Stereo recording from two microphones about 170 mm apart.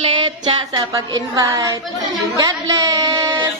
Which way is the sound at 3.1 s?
25° right (ahead or behind).